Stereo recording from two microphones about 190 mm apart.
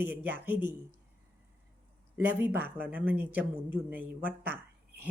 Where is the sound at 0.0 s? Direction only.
10° right (ahead or behind).